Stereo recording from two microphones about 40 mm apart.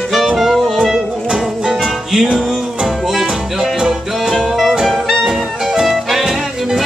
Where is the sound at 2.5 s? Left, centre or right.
Centre.